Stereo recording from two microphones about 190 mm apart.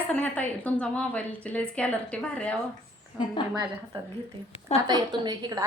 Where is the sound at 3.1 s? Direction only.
10° right (ahead or behind).